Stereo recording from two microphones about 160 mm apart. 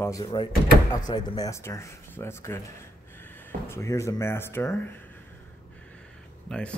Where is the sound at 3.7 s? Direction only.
20° left (ahead or behind).